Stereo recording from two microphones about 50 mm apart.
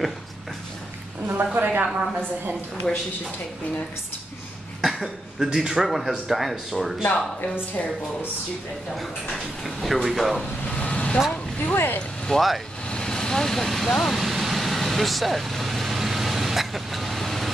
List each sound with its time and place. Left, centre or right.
1.2 s a woman's voice: right
2.9 s speech: centre
4.8 s speech: centre
7.1 s speech: centre
8.9 s speech: centre
10.8 s vehicle: left
11.7 s speech: left
12.3 s speech: centre
12.9 s speech: centre
14.1 s vehicle: centre